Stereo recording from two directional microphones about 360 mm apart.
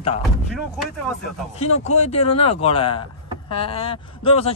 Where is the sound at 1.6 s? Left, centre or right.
Centre.